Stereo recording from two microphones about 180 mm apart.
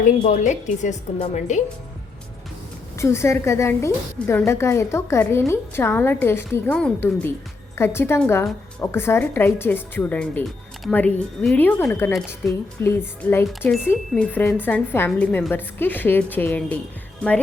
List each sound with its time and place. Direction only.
0.0 s a woman's voice: 45° left (ahead or behind)
3.0 s a woman's voice: 15° left (ahead or behind)